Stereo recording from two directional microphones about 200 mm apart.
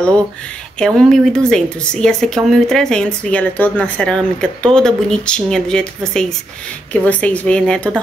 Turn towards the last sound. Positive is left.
turn(degrees=5)  # may be behind; listen again after turning